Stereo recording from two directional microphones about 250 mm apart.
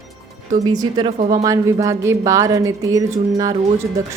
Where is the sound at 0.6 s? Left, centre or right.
Centre.